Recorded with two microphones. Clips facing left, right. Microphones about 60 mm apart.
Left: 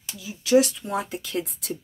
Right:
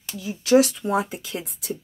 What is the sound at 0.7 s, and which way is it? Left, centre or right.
Speech, centre.